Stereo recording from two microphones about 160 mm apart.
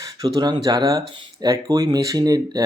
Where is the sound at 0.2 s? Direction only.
25° right (ahead or behind).